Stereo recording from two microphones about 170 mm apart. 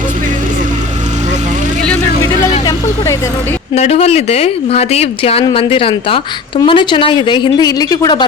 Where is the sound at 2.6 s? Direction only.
20° left (ahead or behind).